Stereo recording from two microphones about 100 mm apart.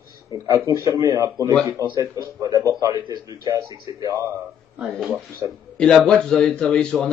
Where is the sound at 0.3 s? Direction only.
35° right (ahead or behind).